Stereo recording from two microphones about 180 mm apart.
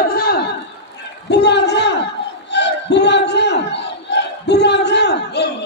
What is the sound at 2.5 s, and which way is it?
Battle cry, 75° left (ahead or behind).